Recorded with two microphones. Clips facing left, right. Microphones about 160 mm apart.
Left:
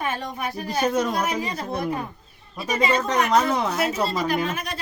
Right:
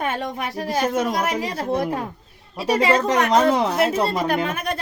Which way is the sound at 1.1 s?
80° right.